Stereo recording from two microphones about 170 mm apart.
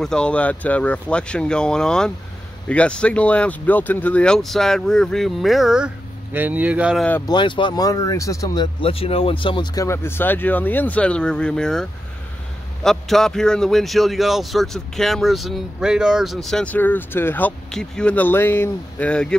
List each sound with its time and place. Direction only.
0.0 s a man's voice: 5° left (ahead or behind)
7.2 s speech: 30° left (ahead or behind)
8.8 s speech: 35° left (ahead or behind)
9.8 s a man's voice: 15° left (ahead or behind)